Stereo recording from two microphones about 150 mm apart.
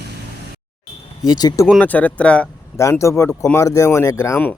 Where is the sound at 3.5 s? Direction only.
20° left (ahead or behind).